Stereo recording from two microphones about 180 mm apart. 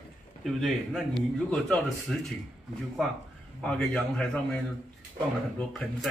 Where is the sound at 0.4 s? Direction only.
Centre (ahead or behind).